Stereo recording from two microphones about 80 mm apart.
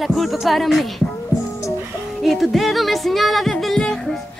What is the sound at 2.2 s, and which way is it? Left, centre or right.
Music, centre.